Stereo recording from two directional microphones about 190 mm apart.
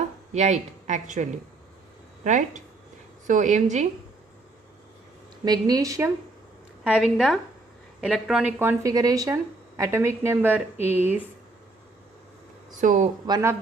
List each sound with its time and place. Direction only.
0.3 s speech: 40° right (ahead or behind)
5.5 s a woman's voice: 20° right (ahead or behind)
6.8 s a woman's voice: 5° right (ahead or behind)
12.8 s speech: 40° right (ahead or behind)
13.2 s a woman's voice: 20° right (ahead or behind)